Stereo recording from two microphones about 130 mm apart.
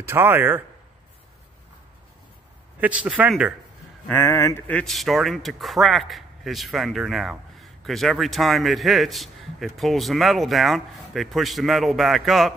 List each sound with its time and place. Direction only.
0.0 s speech: 15° right (ahead or behind)
2.8 s speech: 10° right (ahead or behind)
4.1 s speech: 20° left (ahead or behind)
4.6 s a man's voice: 5° left (ahead or behind)